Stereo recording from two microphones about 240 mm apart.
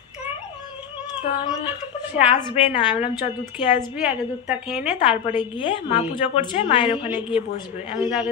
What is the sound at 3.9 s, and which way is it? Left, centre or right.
Speech, centre.